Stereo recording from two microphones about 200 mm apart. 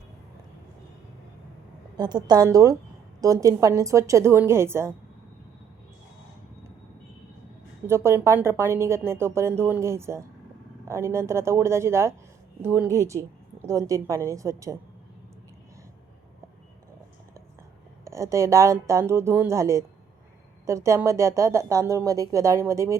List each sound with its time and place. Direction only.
2.0 s a woman's voice: 20° right (ahead or behind)
7.9 s speech: 15° right (ahead or behind)
18.0 s speech: 15° right (ahead or behind)